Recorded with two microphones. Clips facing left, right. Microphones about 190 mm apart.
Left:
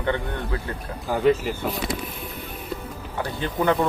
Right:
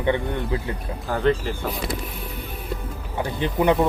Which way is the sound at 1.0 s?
Centre (ahead or behind).